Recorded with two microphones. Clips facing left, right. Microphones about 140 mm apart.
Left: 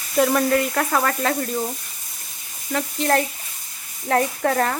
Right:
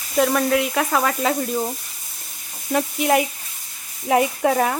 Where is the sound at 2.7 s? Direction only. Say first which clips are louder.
Right 2 dB; 10° right (ahead or behind).